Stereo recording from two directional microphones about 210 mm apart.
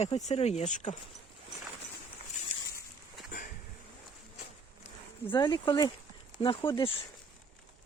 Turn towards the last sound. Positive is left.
turn(degrees=25)  # may be behind; listen again after turning